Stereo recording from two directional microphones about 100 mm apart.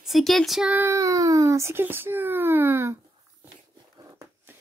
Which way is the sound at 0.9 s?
35° right (ahead or behind).